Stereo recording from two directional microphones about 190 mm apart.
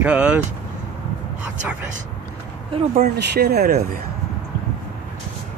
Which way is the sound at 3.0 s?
60° right (ahead or behind).